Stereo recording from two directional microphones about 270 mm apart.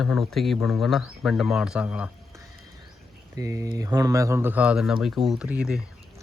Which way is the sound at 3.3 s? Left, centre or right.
Centre.